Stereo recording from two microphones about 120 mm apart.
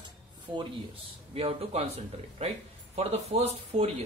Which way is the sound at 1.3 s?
55° right (ahead or behind).